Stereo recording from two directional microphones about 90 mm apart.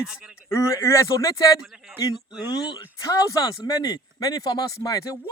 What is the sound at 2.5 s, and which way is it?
Speech, 50° left (ahead or behind).